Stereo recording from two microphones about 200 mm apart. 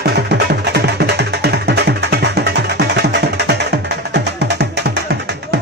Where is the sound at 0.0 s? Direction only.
55° right (ahead or behind).